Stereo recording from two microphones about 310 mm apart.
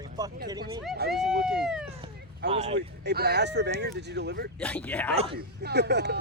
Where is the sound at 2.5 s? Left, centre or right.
Centre.